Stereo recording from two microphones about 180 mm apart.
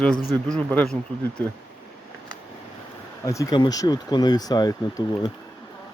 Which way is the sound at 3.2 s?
15° left (ahead or behind).